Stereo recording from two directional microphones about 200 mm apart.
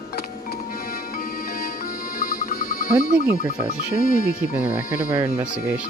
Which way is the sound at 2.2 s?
45° left (ahead or behind).